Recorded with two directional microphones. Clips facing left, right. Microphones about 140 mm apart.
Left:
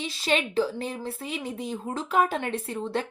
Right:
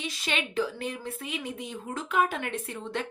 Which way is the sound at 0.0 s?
30° left (ahead or behind).